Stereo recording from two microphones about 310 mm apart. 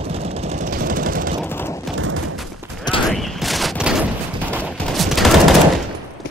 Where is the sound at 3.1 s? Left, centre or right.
Centre.